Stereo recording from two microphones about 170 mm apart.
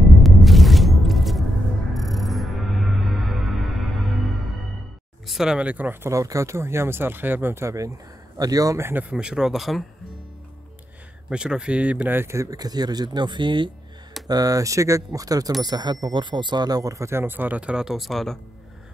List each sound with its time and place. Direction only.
0.2 s music: centre (ahead or behind)
5.2 s speech: centre (ahead or behind)
9.1 s speech: 5° right (ahead or behind)
11.2 s speech: 5° right (ahead or behind)